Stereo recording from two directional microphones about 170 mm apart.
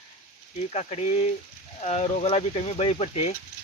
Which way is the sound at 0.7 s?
40° left (ahead or behind).